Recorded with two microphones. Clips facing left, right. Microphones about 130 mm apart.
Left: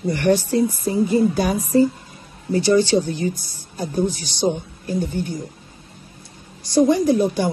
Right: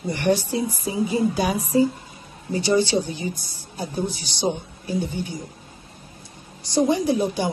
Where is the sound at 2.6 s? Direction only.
50° left (ahead or behind).